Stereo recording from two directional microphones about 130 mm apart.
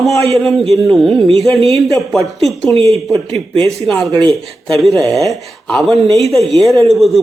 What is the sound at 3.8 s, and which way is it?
Speech, centre (ahead or behind).